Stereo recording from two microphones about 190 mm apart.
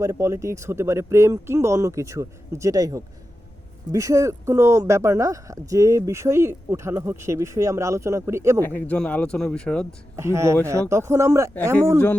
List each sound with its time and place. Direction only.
0.0 s speech: 15° right (ahead or behind)
8.6 s speech: 10° left (ahead or behind)
10.2 s speech: 15° right (ahead or behind)